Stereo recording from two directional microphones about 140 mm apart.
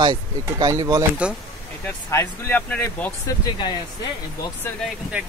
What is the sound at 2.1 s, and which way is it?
Speech, 15° left (ahead or behind).